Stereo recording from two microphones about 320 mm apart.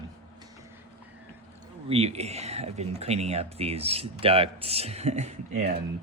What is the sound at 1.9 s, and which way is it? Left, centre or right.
Speech, centre.